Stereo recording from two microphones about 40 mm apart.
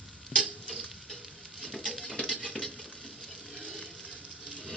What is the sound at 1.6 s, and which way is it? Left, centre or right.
Patter, centre.